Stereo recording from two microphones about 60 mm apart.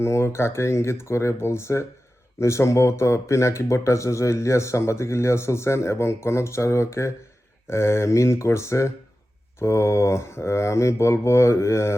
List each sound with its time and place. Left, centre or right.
0.0 s speech: left